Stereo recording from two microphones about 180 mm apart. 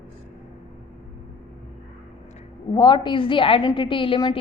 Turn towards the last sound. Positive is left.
turn(degrees=30)  # may be behind; listen again after turning